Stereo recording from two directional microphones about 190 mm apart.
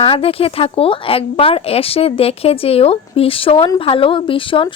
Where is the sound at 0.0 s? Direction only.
30° left (ahead or behind).